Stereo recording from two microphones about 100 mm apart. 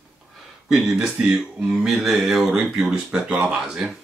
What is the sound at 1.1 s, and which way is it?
Speech, 5° right (ahead or behind).